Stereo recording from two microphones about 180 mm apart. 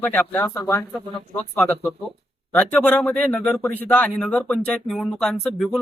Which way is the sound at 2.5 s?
10° left (ahead or behind).